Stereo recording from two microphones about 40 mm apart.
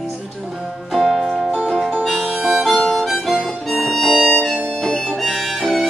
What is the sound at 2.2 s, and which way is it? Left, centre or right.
Harmonica, centre.